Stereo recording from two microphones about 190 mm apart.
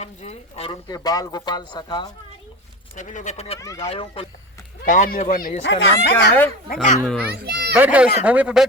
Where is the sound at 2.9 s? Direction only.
40° left (ahead or behind).